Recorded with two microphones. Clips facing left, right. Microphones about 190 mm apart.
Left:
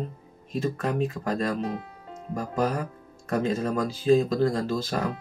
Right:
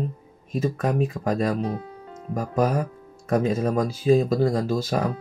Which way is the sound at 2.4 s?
10° right (ahead or behind).